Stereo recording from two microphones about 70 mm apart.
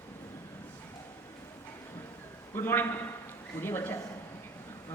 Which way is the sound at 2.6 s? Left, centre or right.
Left.